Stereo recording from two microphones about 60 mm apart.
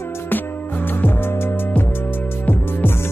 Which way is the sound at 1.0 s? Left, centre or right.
Left.